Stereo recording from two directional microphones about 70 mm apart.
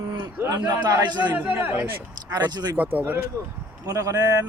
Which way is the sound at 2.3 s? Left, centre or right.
Right.